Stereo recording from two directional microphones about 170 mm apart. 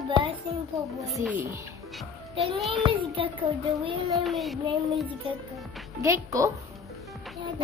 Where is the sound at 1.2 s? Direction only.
10° right (ahead or behind).